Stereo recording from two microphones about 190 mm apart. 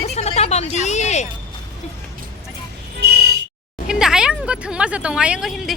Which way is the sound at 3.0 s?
55° right (ahead or behind).